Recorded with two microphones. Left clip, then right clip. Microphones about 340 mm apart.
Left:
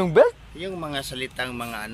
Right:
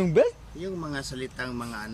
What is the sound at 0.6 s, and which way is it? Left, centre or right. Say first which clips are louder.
Speech: left 4 dB; centre.